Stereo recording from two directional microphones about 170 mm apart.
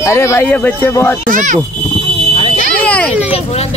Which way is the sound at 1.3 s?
50° right (ahead or behind).